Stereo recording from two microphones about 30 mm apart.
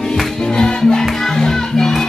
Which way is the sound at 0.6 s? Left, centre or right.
Left.